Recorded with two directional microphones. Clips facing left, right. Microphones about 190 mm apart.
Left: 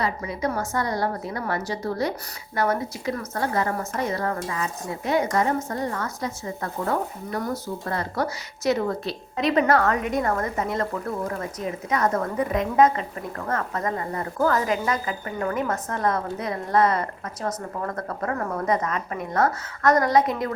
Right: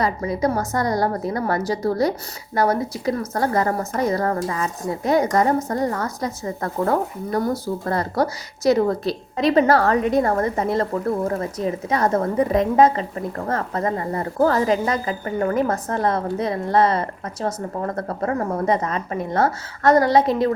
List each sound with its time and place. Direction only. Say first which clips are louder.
0.0 s a woman's voice: right 5 dB; 40° right (ahead or behind)